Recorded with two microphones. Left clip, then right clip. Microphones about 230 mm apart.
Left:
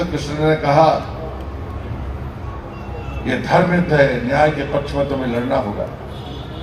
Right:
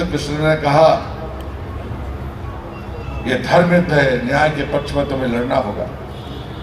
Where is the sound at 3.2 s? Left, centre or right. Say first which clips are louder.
Right 2 dB; right.